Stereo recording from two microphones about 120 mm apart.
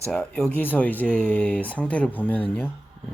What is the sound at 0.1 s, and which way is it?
Speech, 5° left (ahead or behind).